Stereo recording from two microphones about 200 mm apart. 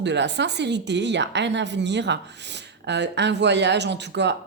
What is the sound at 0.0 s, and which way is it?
A woman's voice, 60° right (ahead or behind).